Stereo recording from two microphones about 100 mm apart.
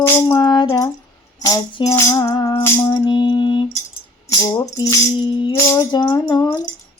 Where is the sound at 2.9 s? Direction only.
45° left (ahead or behind).